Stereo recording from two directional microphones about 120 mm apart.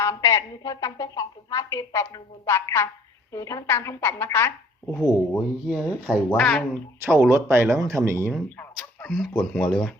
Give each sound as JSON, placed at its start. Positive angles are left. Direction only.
{"t": 0.0, "sound": "a woman's voice", "side_deg": 25}
{"t": 4.9, "sound": "speech", "side_deg": 10}
{"t": 5.6, "sound": "speech", "side_deg": -5}
{"t": 6.3, "sound": "speech", "side_deg": 5}
{"t": 7.0, "sound": "speech", "side_deg": -20}
{"t": 8.5, "sound": "a sound", "side_deg": 15}
{"t": 9.3, "sound": "speech", "side_deg": 15}